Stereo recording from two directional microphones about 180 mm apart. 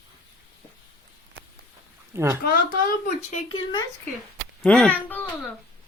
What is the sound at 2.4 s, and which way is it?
Speech, 50° left (ahead or behind).